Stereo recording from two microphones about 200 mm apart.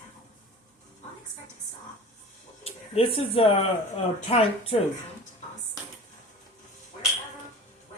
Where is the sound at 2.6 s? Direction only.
30° left (ahead or behind).